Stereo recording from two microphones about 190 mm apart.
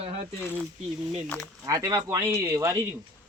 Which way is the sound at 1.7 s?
20° right (ahead or behind).